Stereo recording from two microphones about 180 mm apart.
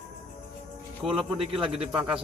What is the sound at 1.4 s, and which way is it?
Speech, 30° right (ahead or behind).